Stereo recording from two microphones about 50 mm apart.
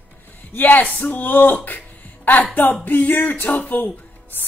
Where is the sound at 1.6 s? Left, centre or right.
Left.